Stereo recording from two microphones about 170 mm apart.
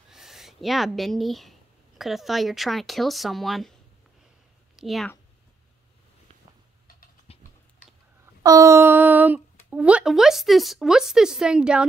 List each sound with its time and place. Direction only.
0.1 s speech: centre (ahead or behind)
4.7 s a woman's voice: centre (ahead or behind)
7.3 s typing: 35° left (ahead or behind)
8.4 s speech: 20° right (ahead or behind)